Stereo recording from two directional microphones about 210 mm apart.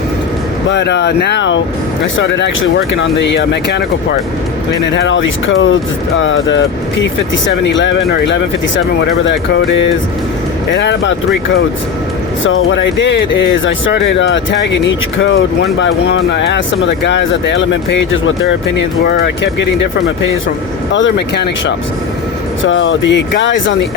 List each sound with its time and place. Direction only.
0.7 s speech: 55° left (ahead or behind)
4.9 s speech: 60° left (ahead or behind)
12.5 s speech: 70° left (ahead or behind)
20.9 s speech: 55° left (ahead or behind)
22.6 s speech: 65° left (ahead or behind)